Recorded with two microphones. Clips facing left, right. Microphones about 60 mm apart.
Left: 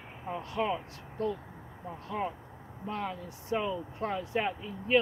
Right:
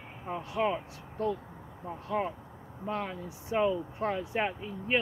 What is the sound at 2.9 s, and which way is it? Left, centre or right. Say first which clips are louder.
Speech: right 1 dB; centre.